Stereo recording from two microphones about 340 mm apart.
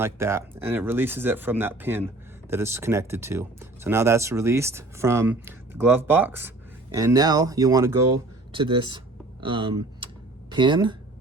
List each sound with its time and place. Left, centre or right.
0.0 s speech: centre